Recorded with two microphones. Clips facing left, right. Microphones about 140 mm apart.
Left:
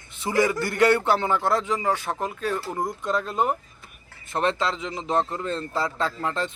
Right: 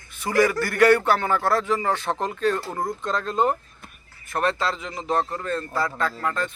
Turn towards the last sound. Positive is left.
turn(degrees=25)  # may be behind; listen again after turning